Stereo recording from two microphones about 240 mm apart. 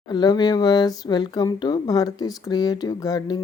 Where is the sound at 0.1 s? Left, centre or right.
Centre.